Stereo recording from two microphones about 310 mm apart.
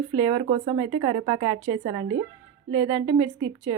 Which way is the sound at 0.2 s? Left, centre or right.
Centre.